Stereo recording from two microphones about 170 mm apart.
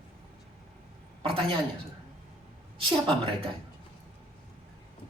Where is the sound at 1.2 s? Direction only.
35° right (ahead or behind).